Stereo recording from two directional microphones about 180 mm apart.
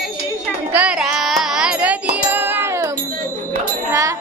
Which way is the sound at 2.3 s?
10° right (ahead or behind).